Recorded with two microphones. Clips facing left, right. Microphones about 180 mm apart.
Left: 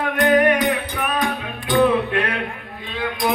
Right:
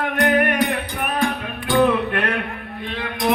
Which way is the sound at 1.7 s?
50° right (ahead or behind).